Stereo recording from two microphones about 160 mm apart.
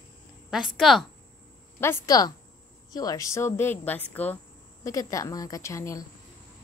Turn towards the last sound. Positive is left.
turn(degrees=20)  # may be behind; listen again after turning